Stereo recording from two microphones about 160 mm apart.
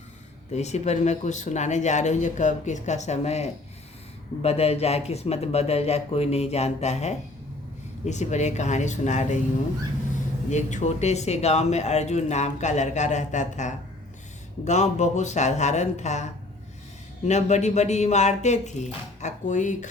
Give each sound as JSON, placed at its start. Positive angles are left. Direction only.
{"t": 0.5, "sound": "a man's voice", "side_deg": 45}
{"t": 10.5, "sound": "speech", "side_deg": 50}